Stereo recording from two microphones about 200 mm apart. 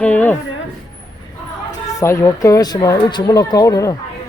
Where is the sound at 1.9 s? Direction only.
15° left (ahead or behind).